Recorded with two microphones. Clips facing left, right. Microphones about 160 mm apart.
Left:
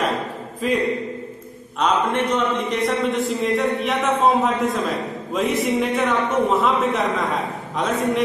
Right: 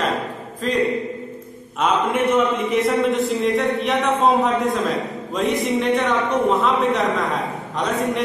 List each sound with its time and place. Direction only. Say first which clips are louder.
0.6 s a man's voice: left 1 dB; 10° left (ahead or behind)
1.8 s a man's voice: right 1 dB; 5° right (ahead or behind)